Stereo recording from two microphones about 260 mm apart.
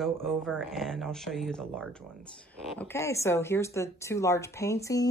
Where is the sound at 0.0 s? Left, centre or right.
Centre.